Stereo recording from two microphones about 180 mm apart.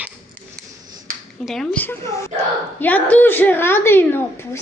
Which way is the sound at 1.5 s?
Centre (ahead or behind).